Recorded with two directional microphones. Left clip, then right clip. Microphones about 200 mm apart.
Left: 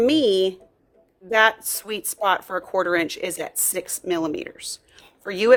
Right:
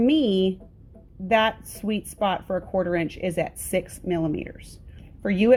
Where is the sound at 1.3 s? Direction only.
25° left (ahead or behind).